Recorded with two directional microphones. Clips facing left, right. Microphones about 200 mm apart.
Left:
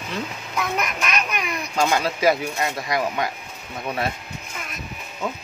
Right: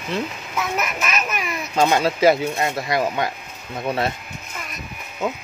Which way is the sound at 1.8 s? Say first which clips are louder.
Right 4 dB; 25° right (ahead or behind).